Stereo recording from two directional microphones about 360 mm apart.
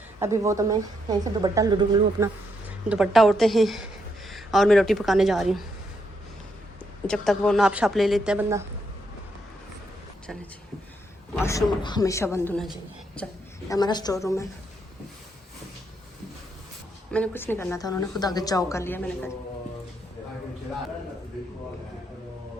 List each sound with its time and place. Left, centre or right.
0.2 s speech: centre
2.9 s a woman's voice: centre
7.1 s a woman's voice: centre
11.3 s a woman's voice: centre
17.1 s a woman's voice: centre